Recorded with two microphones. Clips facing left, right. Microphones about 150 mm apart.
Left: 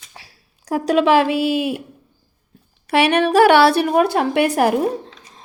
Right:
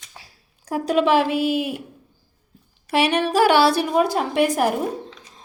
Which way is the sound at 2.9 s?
65° left (ahead or behind).